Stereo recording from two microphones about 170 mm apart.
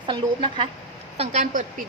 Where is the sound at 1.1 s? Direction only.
45° right (ahead or behind).